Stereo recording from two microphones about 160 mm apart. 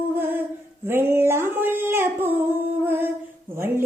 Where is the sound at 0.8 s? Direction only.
15° right (ahead or behind).